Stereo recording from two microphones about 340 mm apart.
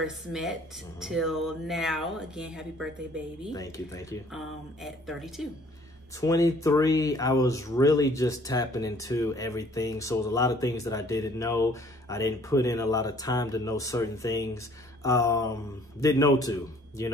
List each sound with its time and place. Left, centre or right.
0.0 s speech: centre
3.5 s speech: centre
6.2 s speech: centre